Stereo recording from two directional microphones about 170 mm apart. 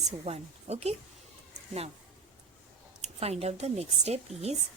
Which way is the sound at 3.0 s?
35° right (ahead or behind).